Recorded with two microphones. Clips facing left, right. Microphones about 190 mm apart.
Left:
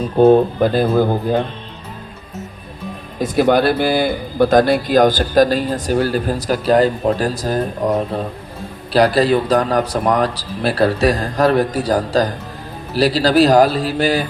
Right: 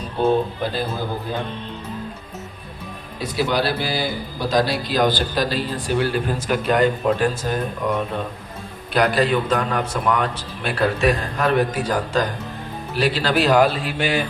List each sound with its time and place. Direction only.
0.2 s speech: 40° left (ahead or behind)
3.2 s a man's voice: 50° left (ahead or behind)